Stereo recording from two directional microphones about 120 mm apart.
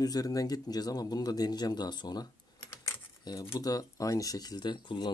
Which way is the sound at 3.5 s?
30° left (ahead or behind).